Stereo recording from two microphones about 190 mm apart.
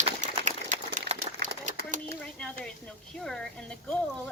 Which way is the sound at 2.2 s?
5° left (ahead or behind).